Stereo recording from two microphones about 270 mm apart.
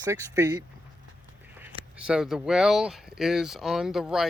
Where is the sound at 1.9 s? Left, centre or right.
Centre.